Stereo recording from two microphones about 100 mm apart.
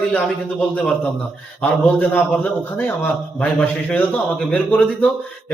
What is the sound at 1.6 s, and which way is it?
A man's voice, 15° left (ahead or behind).